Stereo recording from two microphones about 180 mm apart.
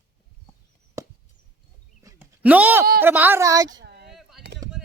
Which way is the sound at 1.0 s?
20° right (ahead or behind).